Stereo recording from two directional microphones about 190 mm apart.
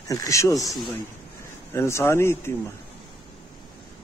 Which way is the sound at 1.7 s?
15° left (ahead or behind).